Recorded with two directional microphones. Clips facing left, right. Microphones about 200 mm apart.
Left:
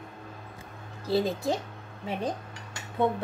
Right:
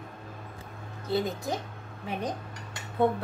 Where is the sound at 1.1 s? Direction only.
30° left (ahead or behind).